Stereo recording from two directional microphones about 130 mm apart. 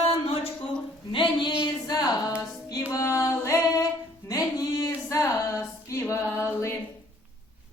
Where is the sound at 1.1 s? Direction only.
40° left (ahead or behind); by 6.2 s 20° left (ahead or behind).